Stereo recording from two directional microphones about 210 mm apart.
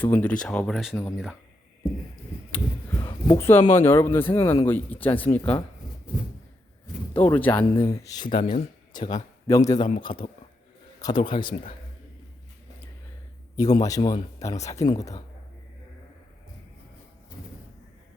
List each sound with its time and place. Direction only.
0.0 s speech: 10° left (ahead or behind)
2.5 s speech: 10° left (ahead or behind)
6.8 s speech: 10° left (ahead or behind)
11.0 s a man's voice: 20° left (ahead or behind)
13.6 s speech: 20° left (ahead or behind)